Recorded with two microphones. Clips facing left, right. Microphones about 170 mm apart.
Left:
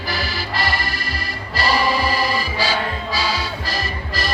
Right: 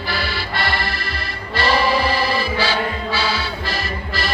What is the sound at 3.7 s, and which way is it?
Music, 40° left (ahead or behind).